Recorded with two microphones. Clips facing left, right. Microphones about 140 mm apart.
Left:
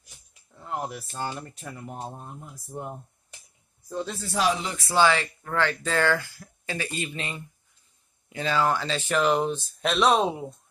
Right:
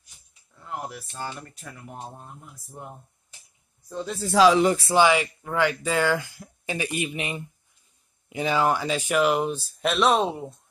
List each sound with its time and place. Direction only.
0.6 s a sound: 25° left (ahead or behind)
1.0 s speech: 30° left (ahead or behind)
3.9 s speech: centre (ahead or behind)
4.3 s speech: 75° right (ahead or behind)
4.9 s speech: 15° right (ahead or behind)